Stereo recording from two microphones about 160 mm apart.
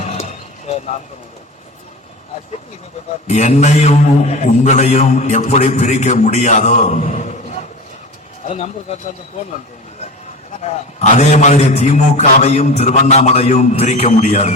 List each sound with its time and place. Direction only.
0.0 s a sound: 45° left (ahead or behind)
3.2 s a man's voice: 45° left (ahead or behind)
10.6 s a man's voice: 45° left (ahead or behind)